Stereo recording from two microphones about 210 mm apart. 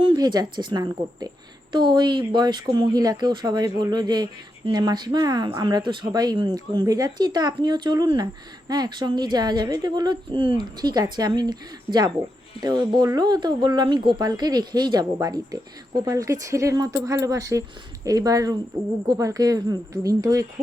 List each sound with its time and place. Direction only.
0.0 s speech: 20° right (ahead or behind)